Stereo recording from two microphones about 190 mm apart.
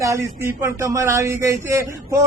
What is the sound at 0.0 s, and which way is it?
Speech, 15° right (ahead or behind).